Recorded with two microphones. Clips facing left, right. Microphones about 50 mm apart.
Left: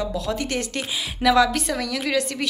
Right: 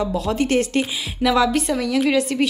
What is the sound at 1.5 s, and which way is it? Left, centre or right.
Speech, right.